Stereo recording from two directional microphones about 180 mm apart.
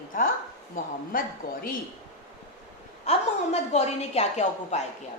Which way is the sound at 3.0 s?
35° left (ahead or behind).